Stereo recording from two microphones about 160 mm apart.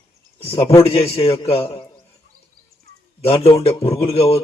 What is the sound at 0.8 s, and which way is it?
A man's voice, 40° left (ahead or behind).